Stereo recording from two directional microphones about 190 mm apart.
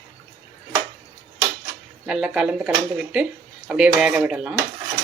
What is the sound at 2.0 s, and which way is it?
Speech, 5° right (ahead or behind).